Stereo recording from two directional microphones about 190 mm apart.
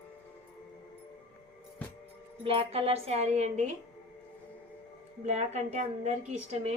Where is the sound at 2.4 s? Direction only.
30° right (ahead or behind).